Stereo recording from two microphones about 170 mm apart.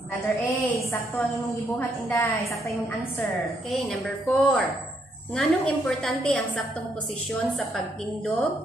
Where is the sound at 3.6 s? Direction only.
Centre (ahead or behind).